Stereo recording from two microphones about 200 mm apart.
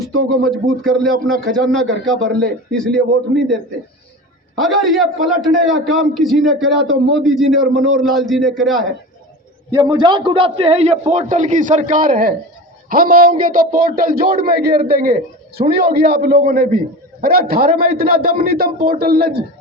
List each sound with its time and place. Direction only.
0.0 s a man's voice: centre (ahead or behind)
4.7 s a man's voice: centre (ahead or behind)
9.7 s a man's voice: 20° right (ahead or behind); by 19.4 s 50° right (ahead or behind)